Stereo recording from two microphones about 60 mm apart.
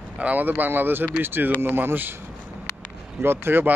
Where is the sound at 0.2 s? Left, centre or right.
Right.